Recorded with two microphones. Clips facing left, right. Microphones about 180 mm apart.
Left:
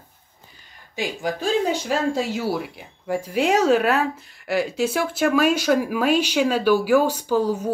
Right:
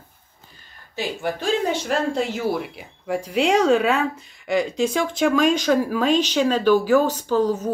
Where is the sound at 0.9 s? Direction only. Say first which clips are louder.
Even; 10° left (ahead or behind).